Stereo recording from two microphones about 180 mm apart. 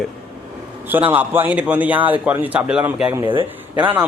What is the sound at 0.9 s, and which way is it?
A man's voice, 10° right (ahead or behind).